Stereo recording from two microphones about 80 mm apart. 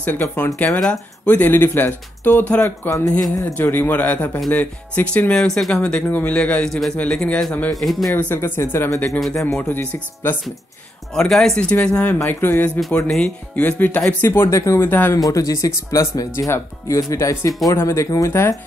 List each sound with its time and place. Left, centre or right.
0.0 s speech: left
0.7 s speech: centre
2.6 s speech: left; by 7.4 s centre
7.7 s speech: centre
8.1 s speech: centre
8.4 s speech: left
9.2 s speech: centre
9.7 s speech: left
11.1 s speech: centre
11.8 s speech: centre; by 14.8 s left
14.8 s speech: left
15.1 s speech: left